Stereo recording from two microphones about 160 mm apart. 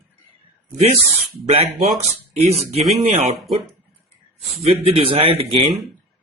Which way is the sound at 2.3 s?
40° right (ahead or behind).